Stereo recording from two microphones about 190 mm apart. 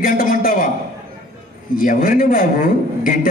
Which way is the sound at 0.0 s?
50° left (ahead or behind).